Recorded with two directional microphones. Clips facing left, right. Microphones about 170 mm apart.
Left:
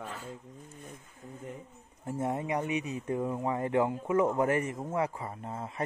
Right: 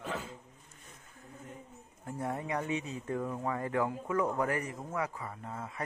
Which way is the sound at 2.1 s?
20° left (ahead or behind).